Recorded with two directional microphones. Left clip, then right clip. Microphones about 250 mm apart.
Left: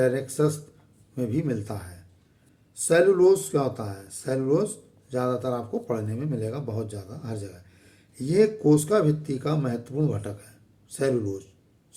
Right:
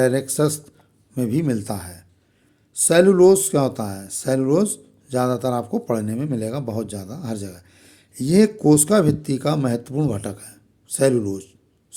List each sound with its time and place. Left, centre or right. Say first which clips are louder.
0.0 s speech: right 4 dB; right